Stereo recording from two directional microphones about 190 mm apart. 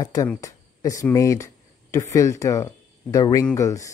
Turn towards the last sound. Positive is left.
turn(degrees=15)  # may be behind; listen again after turning